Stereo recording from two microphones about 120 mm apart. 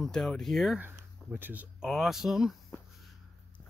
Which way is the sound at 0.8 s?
15° right (ahead or behind).